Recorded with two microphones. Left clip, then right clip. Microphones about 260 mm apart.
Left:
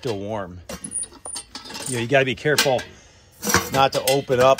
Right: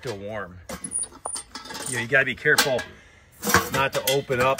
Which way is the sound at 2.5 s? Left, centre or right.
Centre.